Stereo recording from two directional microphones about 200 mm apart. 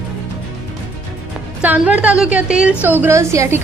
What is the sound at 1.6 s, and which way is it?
A woman's voice, 5° right (ahead or behind).